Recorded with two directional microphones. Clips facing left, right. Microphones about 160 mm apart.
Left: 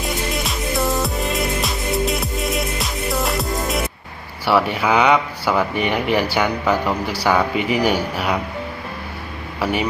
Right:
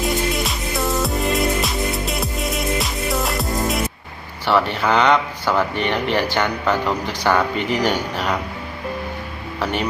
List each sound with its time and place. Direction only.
0.0 s music: centre (ahead or behind)
4.4 s speech: 10° left (ahead or behind)